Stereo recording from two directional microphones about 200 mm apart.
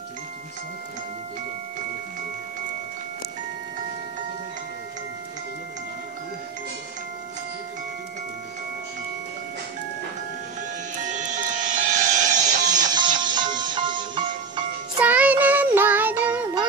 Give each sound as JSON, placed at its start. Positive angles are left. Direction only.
{"t": 11.0, "sound": "music", "side_deg": -40}
{"t": 12.9, "sound": "music", "side_deg": -20}
{"t": 15.0, "sound": "child singing", "side_deg": -5}